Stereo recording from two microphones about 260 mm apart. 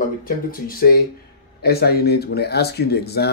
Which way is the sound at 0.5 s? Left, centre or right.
Left.